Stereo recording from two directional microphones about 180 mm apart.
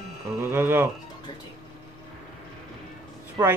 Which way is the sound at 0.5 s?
10° right (ahead or behind).